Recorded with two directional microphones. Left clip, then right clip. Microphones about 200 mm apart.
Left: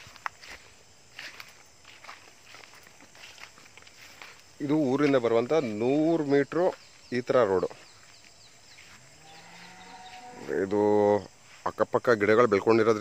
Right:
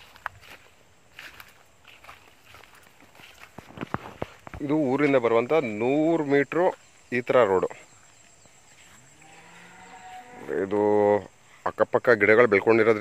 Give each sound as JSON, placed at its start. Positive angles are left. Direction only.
{"t": 0.1, "sound": "walk", "side_deg": -50}
{"t": 4.6, "sound": "speech", "side_deg": 10}
{"t": 10.4, "sound": "a sound", "side_deg": 15}
{"t": 11.6, "sound": "speech", "side_deg": 10}